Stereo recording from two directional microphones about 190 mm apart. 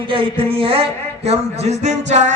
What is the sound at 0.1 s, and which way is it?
A man's voice, 30° right (ahead or behind).